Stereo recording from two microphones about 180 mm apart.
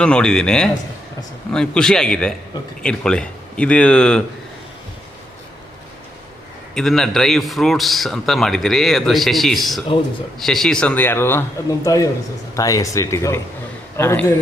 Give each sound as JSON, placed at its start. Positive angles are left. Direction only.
{"t": 0.0, "sound": "a man's voice", "side_deg": 5}
{"t": 6.7, "sound": "a man's voice", "side_deg": 0}